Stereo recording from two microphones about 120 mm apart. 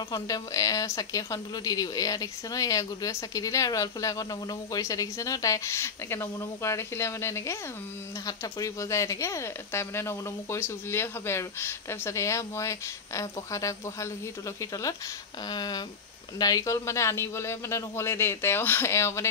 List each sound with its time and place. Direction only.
0.1 s a woman's voice: 30° left (ahead or behind)